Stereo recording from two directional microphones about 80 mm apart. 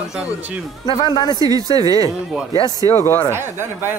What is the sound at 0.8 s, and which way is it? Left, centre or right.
Speech, left.